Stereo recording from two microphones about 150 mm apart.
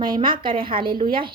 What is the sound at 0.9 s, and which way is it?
Speech, 75° right (ahead or behind).